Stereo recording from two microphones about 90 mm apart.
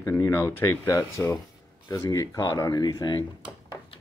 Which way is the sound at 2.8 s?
50° left (ahead or behind).